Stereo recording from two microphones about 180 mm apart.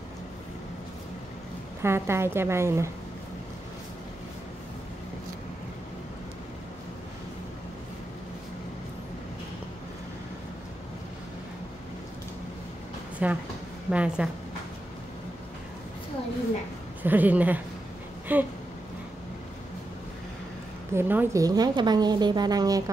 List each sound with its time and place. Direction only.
1.8 s a woman's voice: 15° right (ahead or behind)
13.2 s a woman's voice: 10° right (ahead or behind)
17.0 s a woman's voice: 10° right (ahead or behind)
20.9 s a woman's voice: 10° right (ahead or behind)